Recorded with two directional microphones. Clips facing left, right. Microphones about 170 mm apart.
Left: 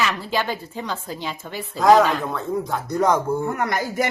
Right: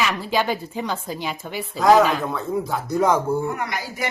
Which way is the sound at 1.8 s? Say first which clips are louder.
Even; centre (ahead or behind).